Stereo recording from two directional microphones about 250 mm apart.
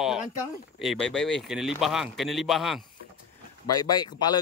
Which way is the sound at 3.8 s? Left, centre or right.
Centre.